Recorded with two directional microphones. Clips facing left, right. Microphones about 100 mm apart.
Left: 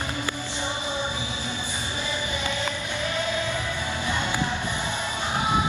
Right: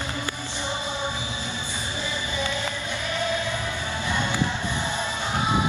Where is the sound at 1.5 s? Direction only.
15° left (ahead or behind).